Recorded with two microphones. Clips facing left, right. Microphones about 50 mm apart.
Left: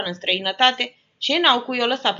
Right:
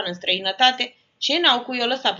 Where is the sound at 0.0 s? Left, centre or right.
Centre.